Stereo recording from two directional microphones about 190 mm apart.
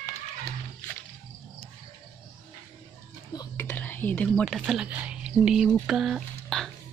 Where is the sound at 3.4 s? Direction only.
10° left (ahead or behind).